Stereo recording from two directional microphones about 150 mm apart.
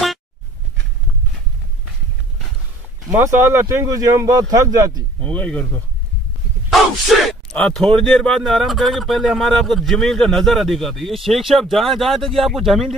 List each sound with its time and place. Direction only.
3.1 s speech: 15° right (ahead or behind)
5.2 s speech: 10° left (ahead or behind)